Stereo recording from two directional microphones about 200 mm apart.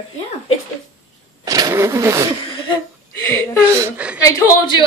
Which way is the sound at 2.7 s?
15° left (ahead or behind).